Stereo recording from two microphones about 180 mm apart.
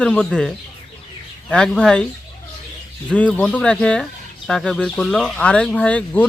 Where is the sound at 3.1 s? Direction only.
5° left (ahead or behind).